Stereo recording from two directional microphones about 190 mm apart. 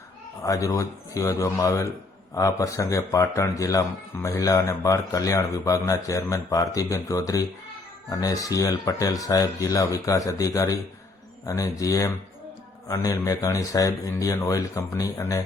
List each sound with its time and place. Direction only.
0.4 s speech: 15° left (ahead or behind)